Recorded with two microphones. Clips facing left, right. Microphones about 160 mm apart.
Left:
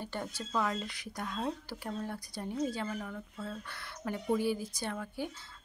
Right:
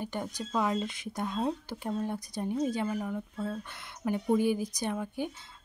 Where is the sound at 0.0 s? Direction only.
15° right (ahead or behind).